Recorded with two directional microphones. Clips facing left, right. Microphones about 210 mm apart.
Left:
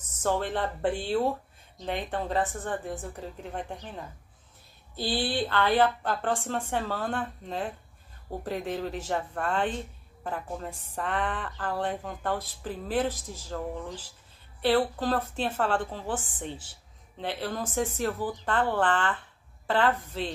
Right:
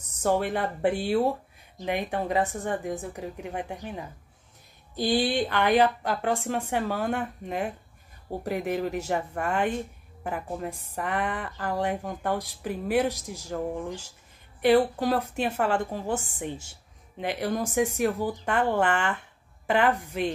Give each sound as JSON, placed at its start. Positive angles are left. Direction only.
{"t": 0.1, "sound": "speech", "side_deg": -10}
{"t": 5.2, "sound": "speech", "side_deg": -15}